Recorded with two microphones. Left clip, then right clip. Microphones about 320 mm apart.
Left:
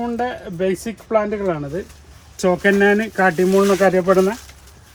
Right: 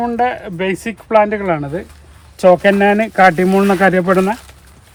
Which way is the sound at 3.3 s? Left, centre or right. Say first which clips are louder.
Right 2 dB; right.